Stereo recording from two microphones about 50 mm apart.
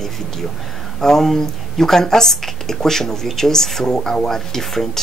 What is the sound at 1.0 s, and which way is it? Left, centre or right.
Speech, centre.